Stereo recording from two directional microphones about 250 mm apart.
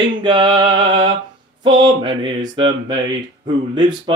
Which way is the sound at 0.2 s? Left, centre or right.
Centre.